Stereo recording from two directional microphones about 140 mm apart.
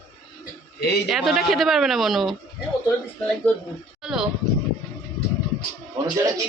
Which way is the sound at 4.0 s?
5° right (ahead or behind).